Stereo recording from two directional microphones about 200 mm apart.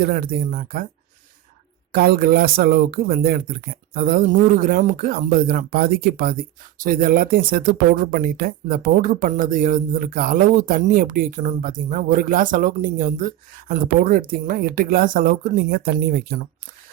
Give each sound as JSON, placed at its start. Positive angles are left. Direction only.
{"t": 0.0, "sound": "speech", "side_deg": -45}
{"t": 1.9, "sound": "speech", "side_deg": -50}